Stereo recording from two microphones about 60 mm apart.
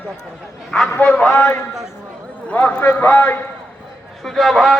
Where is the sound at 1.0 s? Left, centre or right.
Left.